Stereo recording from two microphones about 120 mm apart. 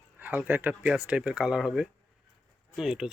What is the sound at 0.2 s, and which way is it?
Speech, 15° right (ahead or behind).